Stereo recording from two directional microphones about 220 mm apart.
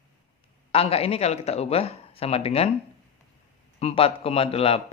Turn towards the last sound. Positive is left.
turn(degrees=25)  # may be behind; listen again after turning